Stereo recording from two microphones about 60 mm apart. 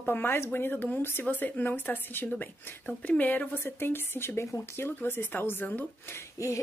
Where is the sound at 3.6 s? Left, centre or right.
Left.